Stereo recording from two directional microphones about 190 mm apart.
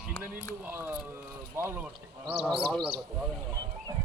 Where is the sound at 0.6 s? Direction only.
10° right (ahead or behind).